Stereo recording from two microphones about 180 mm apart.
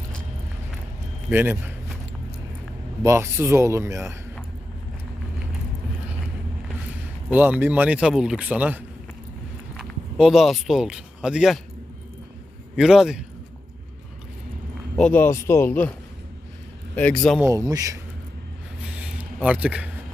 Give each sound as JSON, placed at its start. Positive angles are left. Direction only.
{"t": 1.3, "sound": "speech", "side_deg": -10}
{"t": 3.0, "sound": "speech", "side_deg": -15}
{"t": 7.3, "sound": "speech", "side_deg": -10}
{"t": 12.7, "sound": "a man's voice", "side_deg": -5}
{"t": 14.9, "sound": "speech", "side_deg": 5}
{"t": 16.9, "sound": "a man's voice", "side_deg": 5}
{"t": 17.4, "sound": "speech", "side_deg": -20}
{"t": 18.9, "sound": "a sound", "side_deg": -5}